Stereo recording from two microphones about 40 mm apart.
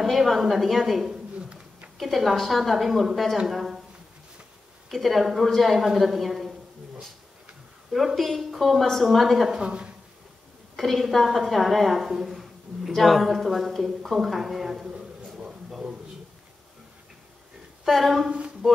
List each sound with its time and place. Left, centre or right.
0.0 s a woman's voice: centre
4.8 s a woman's voice: centre
7.9 s a woman's voice: centre
9.6 s a woman's voice: right
10.8 s a woman's voice: centre
17.8 s a woman's voice: centre